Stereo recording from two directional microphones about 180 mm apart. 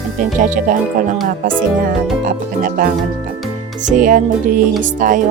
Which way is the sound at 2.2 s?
50° right (ahead or behind).